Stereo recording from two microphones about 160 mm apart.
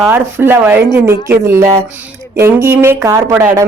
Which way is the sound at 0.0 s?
10° right (ahead or behind).